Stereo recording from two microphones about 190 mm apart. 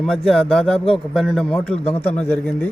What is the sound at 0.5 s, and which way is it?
A man's voice, 5° left (ahead or behind).